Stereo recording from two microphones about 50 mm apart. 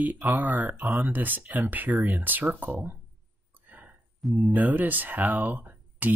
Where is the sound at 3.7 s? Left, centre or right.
Right.